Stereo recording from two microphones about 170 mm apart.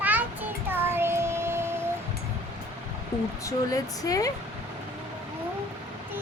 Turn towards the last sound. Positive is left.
turn(degrees=20)  # may be behind; listen again after turning